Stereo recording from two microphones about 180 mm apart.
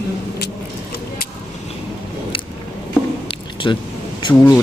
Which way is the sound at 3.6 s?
25° left (ahead or behind).